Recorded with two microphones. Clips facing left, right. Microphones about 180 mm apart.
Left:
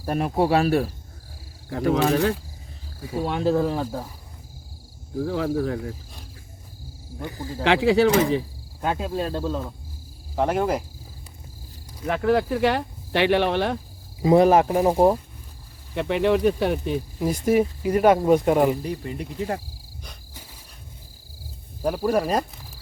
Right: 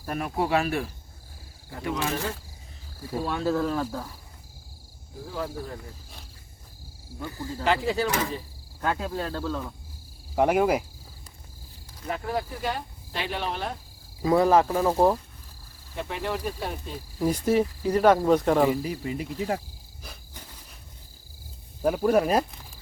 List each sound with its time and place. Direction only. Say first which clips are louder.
0.0 s speech: left 6 dB; 30° left (ahead or behind)
3.1 s speech: left 4 dB; 20° left (ahead or behind)
5.2 s speech: left 9 dB; 70° left (ahead or behind)
7.2 s speech: left 2 dB; 20° left (ahead or behind)
7.6 s speech: left 7 dB; 75° left (ahead or behind)
8.8 s speech: left 3 dB; 20° left (ahead or behind)
10.3 s speech: right 1 dB; 10° right (ahead or behind)
12.0 s speech: left 9 dB; 75° left (ahead or behind)
14.2 s speech: left 4 dB; 20° left (ahead or behind)
16.0 s speech: left 10 dB; 75° left (ahead or behind)
17.2 s speech: left 1 dB; 10° left (ahead or behind)
18.7 s speech: left 1 dB; 5° right (ahead or behind)
21.8 s speech: right 1 dB; 5° left (ahead or behind)